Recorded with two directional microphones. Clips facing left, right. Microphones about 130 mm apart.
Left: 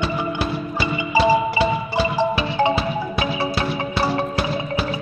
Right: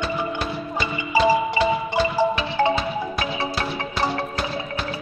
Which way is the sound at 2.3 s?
10° left (ahead or behind).